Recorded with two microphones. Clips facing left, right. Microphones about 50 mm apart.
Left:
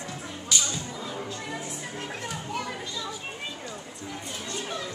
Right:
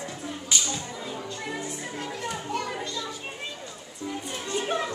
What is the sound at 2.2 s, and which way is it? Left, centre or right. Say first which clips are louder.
Children playing: right 3 dB; centre.